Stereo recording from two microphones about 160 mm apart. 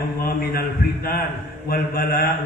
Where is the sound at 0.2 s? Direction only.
75° left (ahead or behind).